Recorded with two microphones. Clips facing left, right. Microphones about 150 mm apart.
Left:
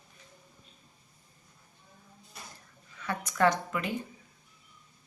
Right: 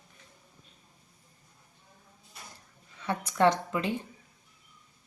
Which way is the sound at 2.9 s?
25° right (ahead or behind).